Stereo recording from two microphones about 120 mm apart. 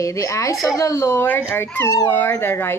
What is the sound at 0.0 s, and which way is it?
Speech, 25° left (ahead or behind).